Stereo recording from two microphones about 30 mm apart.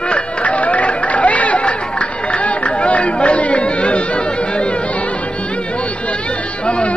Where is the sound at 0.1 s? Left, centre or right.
Left.